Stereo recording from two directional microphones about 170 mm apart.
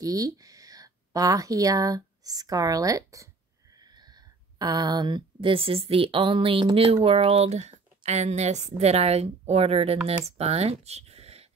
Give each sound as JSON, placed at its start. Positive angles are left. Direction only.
{"t": 0.0, "sound": "speech", "side_deg": -20}